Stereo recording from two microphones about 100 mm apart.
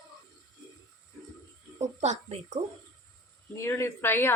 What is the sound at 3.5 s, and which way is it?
Speech, 30° left (ahead or behind).